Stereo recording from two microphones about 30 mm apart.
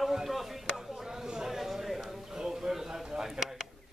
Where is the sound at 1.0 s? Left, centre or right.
Right.